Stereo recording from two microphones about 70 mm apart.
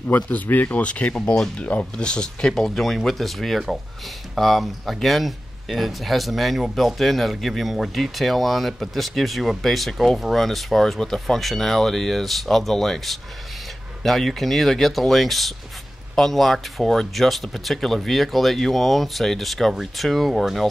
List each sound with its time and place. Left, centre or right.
0.1 s speech: left; by 20.6 s centre